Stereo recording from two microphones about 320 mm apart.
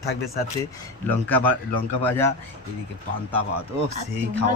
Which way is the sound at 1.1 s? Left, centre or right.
Centre.